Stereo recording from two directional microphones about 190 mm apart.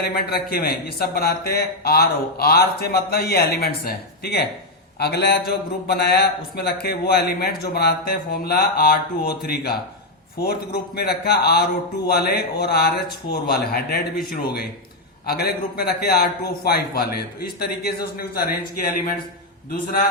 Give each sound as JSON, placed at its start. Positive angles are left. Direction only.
{"t": 0.0, "sound": "a man's voice", "side_deg": 55}
{"t": 15.3, "sound": "a man's voice", "side_deg": 55}